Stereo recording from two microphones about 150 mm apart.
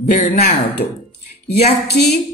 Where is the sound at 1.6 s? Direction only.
90° left.